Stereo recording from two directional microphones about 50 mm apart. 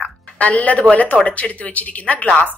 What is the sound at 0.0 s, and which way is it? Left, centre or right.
Speech, left.